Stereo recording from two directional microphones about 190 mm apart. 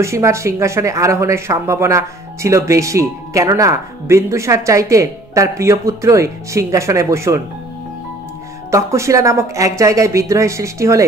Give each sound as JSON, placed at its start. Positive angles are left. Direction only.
{"t": 0.0, "sound": "speech", "side_deg": -15}
{"t": 8.6, "sound": "speech", "side_deg": -15}